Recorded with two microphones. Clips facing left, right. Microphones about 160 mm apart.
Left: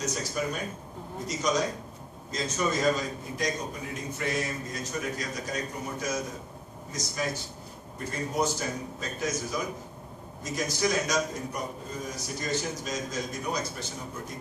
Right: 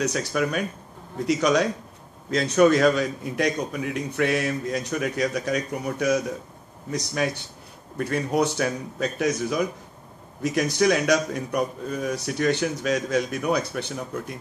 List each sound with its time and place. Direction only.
0.0 s a man's voice: 70° right (ahead or behind)